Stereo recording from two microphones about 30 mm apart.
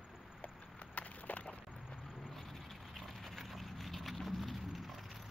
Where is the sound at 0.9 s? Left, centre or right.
Left.